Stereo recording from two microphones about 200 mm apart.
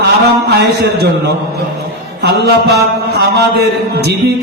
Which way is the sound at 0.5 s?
55° right (ahead or behind).